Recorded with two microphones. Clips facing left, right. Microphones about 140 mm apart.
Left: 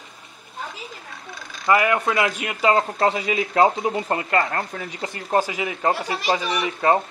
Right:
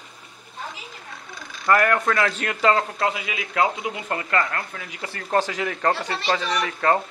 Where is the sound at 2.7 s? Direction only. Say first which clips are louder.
Left 4 dB; 35° left (ahead or behind).